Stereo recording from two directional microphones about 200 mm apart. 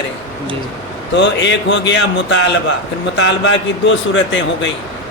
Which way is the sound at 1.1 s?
60° left (ahead or behind).